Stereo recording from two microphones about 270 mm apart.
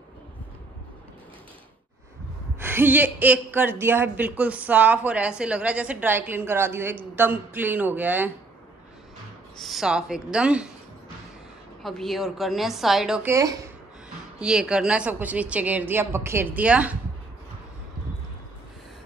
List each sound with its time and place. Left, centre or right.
2.6 s speech: centre
9.6 s a woman's voice: centre
11.8 s a woman's voice: centre